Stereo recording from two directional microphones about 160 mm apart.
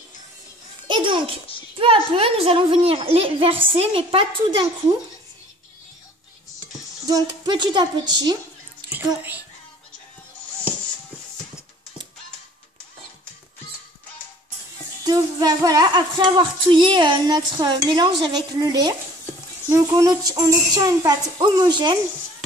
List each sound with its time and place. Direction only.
0.8 s a child's voice: 30° right (ahead or behind)
7.1 s female singing: 25° right (ahead or behind)
8.9 s speech: 10° right (ahead or behind)
15.0 s female singing: 25° right (ahead or behind)